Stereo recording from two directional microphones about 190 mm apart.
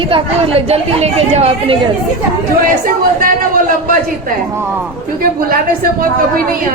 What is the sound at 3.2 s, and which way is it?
Speech, 45° right (ahead or behind).